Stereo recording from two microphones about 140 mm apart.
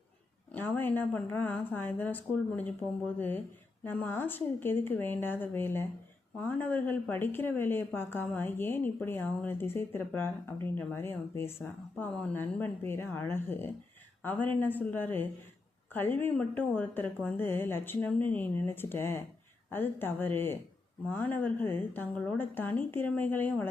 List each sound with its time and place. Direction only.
0.5 s speech: 15° left (ahead or behind)